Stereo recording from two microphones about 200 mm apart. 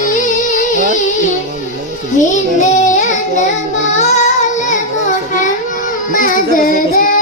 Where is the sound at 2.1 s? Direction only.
40° left (ahead or behind).